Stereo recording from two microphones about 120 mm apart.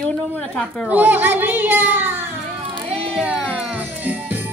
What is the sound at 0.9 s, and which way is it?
A child's voice, 15° right (ahead or behind).